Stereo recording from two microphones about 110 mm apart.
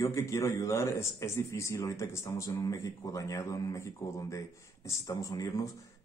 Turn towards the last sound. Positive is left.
turn(degrees=30)  # may be behind; listen again after turning